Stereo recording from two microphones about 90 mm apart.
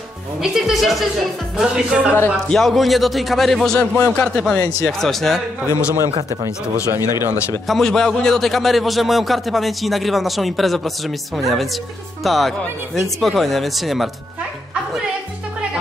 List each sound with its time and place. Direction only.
0.4 s a man's voice: 5° right (ahead or behind)
2.5 s a man's voice: centre (ahead or behind)
7.0 s speech: 45° left (ahead or behind)
7.6 s a man's voice: 5° left (ahead or behind)